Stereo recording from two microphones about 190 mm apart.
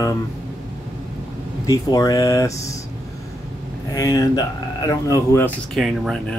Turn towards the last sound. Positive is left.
turn(degrees=0)  # may be behind; listen again after turning